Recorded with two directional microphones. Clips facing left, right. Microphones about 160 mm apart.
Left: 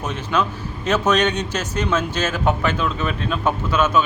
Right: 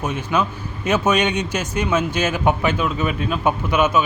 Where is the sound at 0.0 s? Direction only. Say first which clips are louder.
Right 1 dB; 10° right (ahead or behind).